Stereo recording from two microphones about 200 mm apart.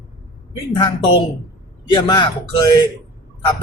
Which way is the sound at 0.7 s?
25° left (ahead or behind).